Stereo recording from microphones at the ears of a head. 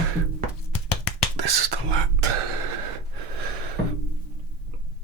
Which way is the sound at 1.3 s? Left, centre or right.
Right.